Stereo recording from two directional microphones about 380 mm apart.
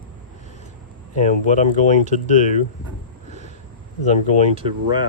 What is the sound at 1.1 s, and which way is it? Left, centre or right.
Speech, centre.